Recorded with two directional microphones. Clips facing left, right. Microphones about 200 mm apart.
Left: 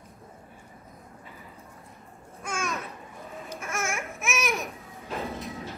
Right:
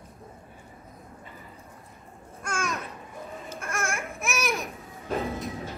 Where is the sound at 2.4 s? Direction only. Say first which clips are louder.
Right 1 dB; centre (ahead or behind).